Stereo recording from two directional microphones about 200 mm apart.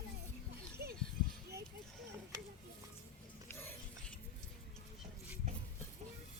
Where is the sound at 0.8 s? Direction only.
50° right (ahead or behind).